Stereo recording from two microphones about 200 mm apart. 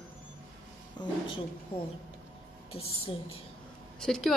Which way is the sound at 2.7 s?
30° left (ahead or behind).